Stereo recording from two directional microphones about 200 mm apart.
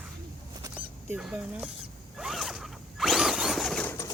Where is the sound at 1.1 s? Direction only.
5° right (ahead or behind).